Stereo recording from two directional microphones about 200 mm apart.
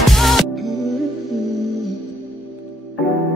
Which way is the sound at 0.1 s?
Centre (ahead or behind).